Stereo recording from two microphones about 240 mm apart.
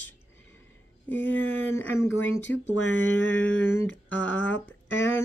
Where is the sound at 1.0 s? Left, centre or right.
Centre.